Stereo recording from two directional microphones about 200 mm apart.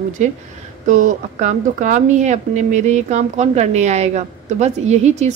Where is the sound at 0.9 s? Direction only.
40° right (ahead or behind).